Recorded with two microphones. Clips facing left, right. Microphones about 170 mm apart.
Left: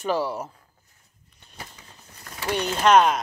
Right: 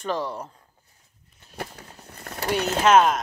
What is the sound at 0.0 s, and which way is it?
Speech, 5° left (ahead or behind).